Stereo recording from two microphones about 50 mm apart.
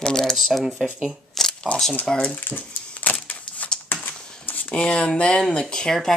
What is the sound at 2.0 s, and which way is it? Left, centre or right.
Speech, left.